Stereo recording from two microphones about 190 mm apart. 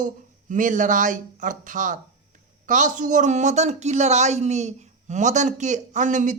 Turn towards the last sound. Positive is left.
turn(degrees=-40)  # may be behind; listen again after turning